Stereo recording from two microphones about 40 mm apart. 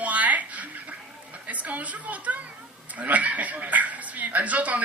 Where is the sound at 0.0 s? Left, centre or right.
Right.